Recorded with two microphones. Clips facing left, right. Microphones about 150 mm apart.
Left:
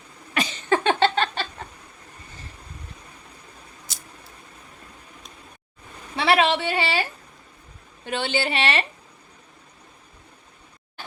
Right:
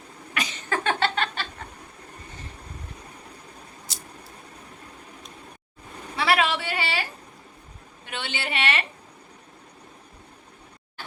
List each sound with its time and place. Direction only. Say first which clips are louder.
0.3 s a sound: left 6 dB; 30° left (ahead or behind)
6.1 s speech: left 3 dB; 25° left (ahead or behind)
8.0 s a woman's voice: left 8 dB; 35° left (ahead or behind)